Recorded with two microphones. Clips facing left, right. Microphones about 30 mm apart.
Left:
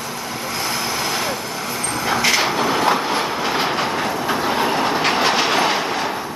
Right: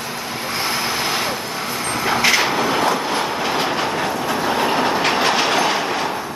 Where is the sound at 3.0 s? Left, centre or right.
Centre.